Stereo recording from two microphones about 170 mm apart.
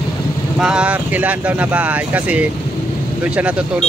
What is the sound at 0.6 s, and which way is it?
Speech, 5° right (ahead or behind).